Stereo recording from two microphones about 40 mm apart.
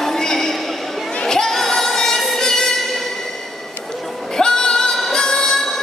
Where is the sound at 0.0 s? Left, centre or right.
Centre.